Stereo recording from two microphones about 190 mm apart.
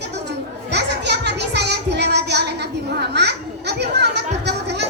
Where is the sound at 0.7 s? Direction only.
65° right (ahead or behind).